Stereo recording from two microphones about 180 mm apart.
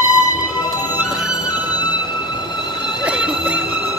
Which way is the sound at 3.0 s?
5° right (ahead or behind).